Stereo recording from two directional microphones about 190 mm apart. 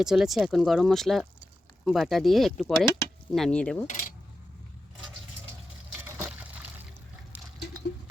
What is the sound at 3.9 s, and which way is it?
Coin, 40° left (ahead or behind).